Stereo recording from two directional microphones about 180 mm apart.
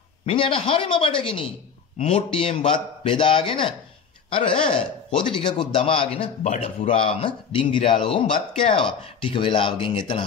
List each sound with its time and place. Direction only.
0.2 s a man's voice: 30° left (ahead or behind)